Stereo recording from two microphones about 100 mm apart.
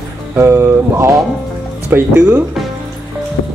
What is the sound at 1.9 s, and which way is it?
Speech, 15° right (ahead or behind).